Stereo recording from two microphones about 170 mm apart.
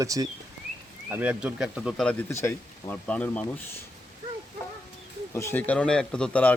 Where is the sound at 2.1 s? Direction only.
10° left (ahead or behind).